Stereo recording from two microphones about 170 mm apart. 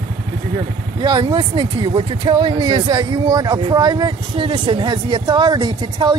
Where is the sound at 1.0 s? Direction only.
25° right (ahead or behind).